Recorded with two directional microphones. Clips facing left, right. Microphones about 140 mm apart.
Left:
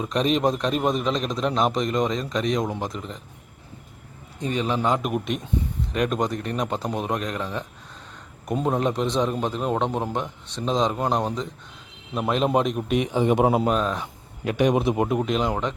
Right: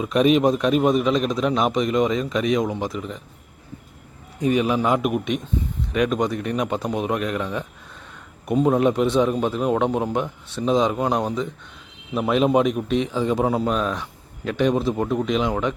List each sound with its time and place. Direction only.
0.0 s a man's voice: 5° right (ahead or behind)
4.5 s a man's voice: 10° right (ahead or behind)
13.1 s a man's voice: 20° left (ahead or behind)
13.7 s a man's voice: centre (ahead or behind)